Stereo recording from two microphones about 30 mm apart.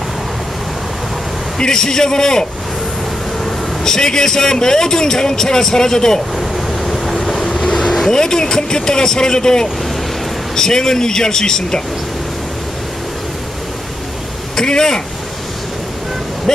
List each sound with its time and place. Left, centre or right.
1.6 s speech: centre
3.4 s speech: centre
7.4 s train: centre
8.1 s speech: left
14.6 s speech: left
16.5 s a sound: centre